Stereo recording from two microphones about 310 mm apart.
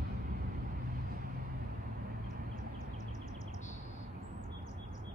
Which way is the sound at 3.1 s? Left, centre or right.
Left.